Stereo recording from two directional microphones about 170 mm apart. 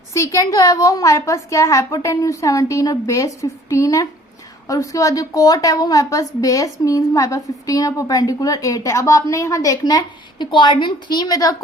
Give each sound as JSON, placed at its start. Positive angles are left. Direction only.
{"t": 0.1, "sound": "a woman's voice", "side_deg": 20}